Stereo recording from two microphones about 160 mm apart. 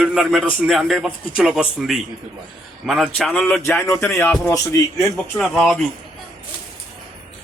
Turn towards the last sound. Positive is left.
turn(degrees=5)  # may be behind; listen again after turning